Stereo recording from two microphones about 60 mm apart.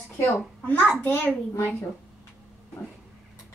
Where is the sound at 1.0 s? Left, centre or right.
Left.